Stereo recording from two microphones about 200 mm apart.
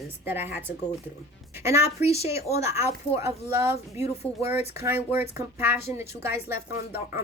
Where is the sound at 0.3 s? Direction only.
10° right (ahead or behind).